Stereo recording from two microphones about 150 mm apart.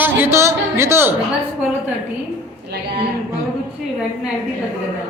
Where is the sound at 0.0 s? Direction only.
15° right (ahead or behind).